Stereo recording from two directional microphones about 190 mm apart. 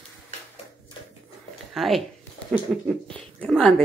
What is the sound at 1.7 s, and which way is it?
Speech, centre (ahead or behind).